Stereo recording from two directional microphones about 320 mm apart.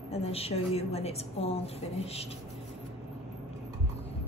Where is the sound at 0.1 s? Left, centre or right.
Centre.